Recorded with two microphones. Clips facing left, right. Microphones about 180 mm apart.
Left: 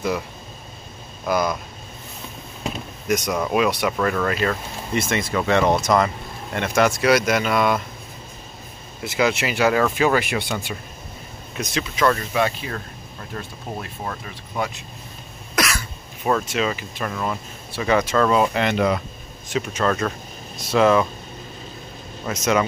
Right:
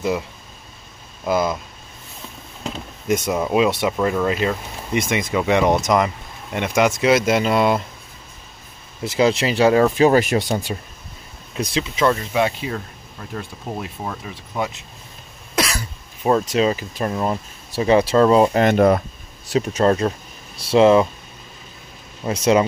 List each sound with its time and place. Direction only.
1.2 s speech: 25° right (ahead or behind)
3.1 s speech: 25° right (ahead or behind)
9.0 s speech: 35° right (ahead or behind)
11.5 s speech: 25° right (ahead or behind)
15.5 s cough: 30° right (ahead or behind)
16.3 s speech: 30° right (ahead or behind)
22.2 s speech: 30° right (ahead or behind)